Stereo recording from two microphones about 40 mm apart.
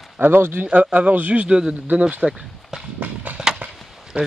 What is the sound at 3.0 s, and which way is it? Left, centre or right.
Clip-clop, right.